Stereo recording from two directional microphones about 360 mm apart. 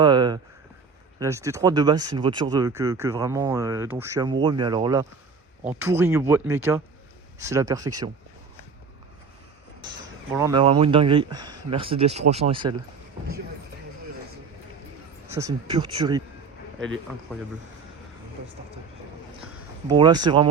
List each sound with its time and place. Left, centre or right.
0.0 s a sound: centre
1.2 s speech: centre
10.3 s speech: centre
15.3 s speech: centre
19.9 s speech: centre